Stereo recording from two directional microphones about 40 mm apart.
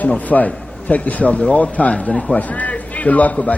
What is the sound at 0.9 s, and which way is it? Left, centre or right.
A man's voice, left.